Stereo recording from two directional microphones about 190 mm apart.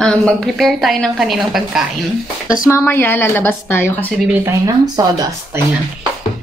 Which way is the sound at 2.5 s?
15° left (ahead or behind).